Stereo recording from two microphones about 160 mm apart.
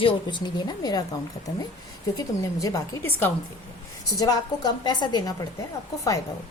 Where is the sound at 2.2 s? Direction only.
20° left (ahead or behind).